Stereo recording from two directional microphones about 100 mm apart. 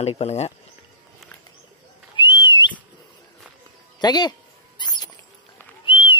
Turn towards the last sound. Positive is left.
turn(degrees=65)  # may be behind; listen again after turning